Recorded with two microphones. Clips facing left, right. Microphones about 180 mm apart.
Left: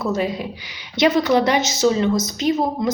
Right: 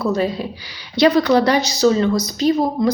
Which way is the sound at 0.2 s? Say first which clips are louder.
Right 2 dB; 15° left (ahead or behind).